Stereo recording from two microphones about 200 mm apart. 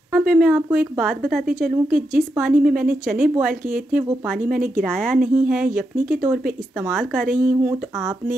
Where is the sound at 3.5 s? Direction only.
45° right (ahead or behind).